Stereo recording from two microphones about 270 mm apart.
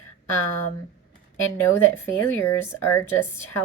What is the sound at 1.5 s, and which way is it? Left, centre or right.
Speech, centre.